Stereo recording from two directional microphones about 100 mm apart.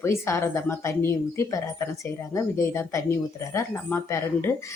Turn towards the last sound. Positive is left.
turn(degrees=25)  # may be behind; listen again after turning